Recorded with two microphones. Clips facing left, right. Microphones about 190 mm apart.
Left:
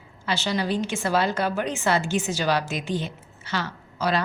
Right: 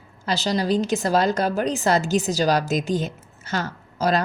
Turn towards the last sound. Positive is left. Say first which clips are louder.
# right 3 dB
turn(degrees=-40)  # may be behind; listen again after turning